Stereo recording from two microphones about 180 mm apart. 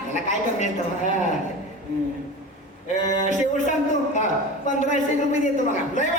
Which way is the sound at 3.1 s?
45° left (ahead or behind).